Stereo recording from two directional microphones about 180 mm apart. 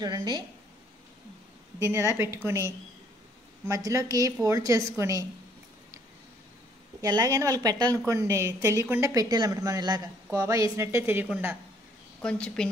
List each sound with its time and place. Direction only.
0.0 s a woman's voice: 25° right (ahead or behind)
1.8 s a woman's voice: 15° right (ahead or behind)
7.0 s a woman's voice: 20° right (ahead or behind)
12.2 s a woman's voice: 5° left (ahead or behind)